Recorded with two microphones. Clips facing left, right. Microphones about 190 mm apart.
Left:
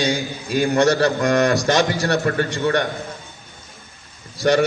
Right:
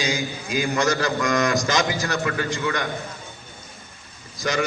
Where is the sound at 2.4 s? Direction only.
60° left (ahead or behind).